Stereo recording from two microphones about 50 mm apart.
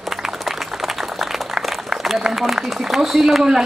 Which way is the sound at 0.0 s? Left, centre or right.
Centre.